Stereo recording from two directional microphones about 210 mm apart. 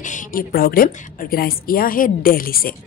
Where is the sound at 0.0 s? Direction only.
40° left (ahead or behind).